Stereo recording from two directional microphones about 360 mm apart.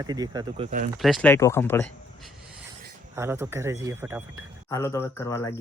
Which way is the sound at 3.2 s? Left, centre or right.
Centre.